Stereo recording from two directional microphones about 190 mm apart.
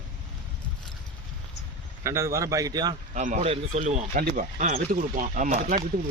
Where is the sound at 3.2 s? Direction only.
40° right (ahead or behind).